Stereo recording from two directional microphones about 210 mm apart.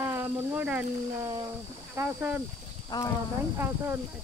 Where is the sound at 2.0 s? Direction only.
10° right (ahead or behind).